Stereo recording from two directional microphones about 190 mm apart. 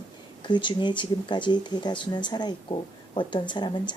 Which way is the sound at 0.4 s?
25° left (ahead or behind).